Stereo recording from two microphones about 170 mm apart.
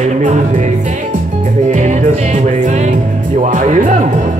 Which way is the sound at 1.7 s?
45° right (ahead or behind).